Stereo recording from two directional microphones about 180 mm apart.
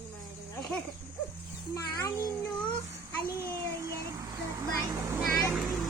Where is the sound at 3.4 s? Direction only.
15° right (ahead or behind).